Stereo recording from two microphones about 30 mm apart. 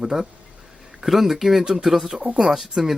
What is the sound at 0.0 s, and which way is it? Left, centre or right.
Speech, centre.